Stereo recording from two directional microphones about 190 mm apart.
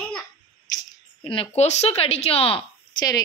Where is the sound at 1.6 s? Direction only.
35° left (ahead or behind).